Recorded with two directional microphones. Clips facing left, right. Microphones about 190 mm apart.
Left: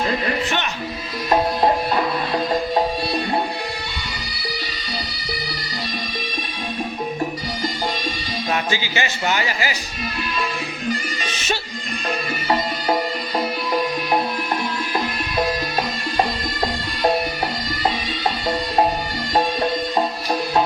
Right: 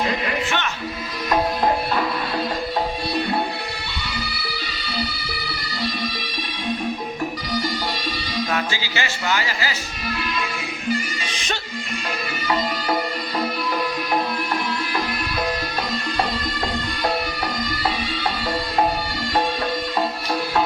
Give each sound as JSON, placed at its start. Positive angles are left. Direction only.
{"t": 8.5, "sound": "speech", "side_deg": 20}